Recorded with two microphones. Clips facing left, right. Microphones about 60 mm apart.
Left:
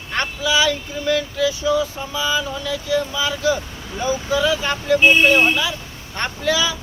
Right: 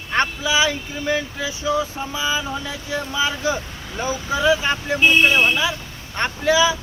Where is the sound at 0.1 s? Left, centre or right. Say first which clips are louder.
Right 1 dB; right.